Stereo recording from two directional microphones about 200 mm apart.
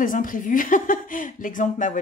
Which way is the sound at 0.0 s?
45° left (ahead or behind).